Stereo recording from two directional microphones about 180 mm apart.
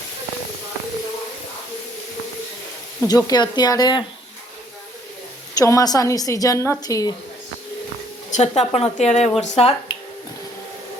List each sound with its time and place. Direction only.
3.0 s a woman's voice: 20° left (ahead or behind)
5.5 s a woman's voice: 20° left (ahead or behind)
8.3 s speech: 35° left (ahead or behind)